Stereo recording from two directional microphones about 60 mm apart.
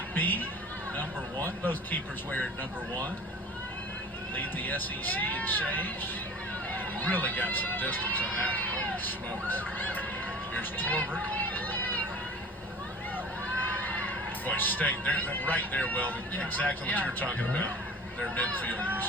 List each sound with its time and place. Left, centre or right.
0.1 s a man's voice: left
4.4 s speech: left
11.3 s a sound: left
14.4 s speech: left